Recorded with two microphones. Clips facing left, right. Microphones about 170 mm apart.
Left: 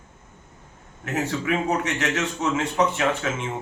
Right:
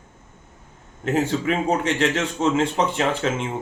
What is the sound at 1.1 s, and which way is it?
A man's voice, 30° right (ahead or behind).